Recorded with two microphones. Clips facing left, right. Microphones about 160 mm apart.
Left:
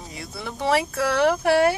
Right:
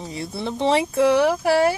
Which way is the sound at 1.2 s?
Centre (ahead or behind).